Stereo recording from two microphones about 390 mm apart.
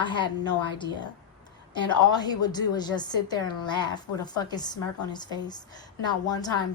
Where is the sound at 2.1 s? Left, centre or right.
Centre.